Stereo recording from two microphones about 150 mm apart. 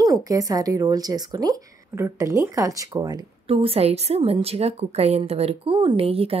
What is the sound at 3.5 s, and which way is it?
A woman's voice, 40° right (ahead or behind).